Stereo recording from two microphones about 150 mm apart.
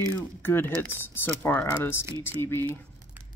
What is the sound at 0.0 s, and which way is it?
Speech, 15° left (ahead or behind).